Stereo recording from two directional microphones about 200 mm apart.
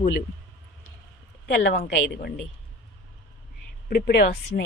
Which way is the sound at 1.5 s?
60° left (ahead or behind).